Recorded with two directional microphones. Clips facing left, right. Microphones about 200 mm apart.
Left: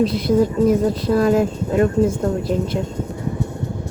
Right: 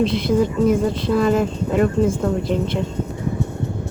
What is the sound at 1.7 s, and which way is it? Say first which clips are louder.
Speech: left 1 dB; 45° left (ahead or behind).